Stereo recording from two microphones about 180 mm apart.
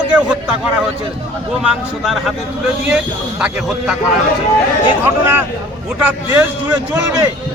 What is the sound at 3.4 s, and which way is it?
Speech, 5° right (ahead or behind).